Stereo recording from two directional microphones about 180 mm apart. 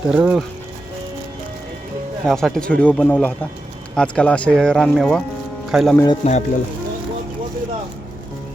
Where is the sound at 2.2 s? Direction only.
Centre (ahead or behind).